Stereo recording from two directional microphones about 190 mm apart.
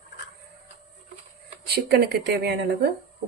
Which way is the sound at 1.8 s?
60° right (ahead or behind).